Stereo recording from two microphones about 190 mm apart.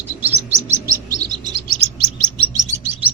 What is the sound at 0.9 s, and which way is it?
Chirp, 20° right (ahead or behind).